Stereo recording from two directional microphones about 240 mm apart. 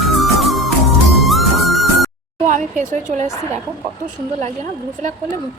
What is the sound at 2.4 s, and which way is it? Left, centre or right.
Speech, right.